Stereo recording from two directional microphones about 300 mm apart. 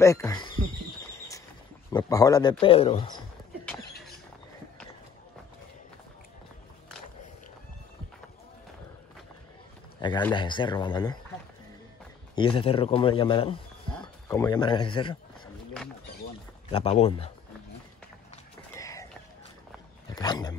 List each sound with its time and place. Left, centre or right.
0.0 s speech: centre
1.9 s a man's voice: centre
3.6 s a sound: centre
10.0 s a man's voice: centre
12.4 s a man's voice: centre
16.7 s speech: left
18.3 s clip-clop: centre
20.1 s speech: centre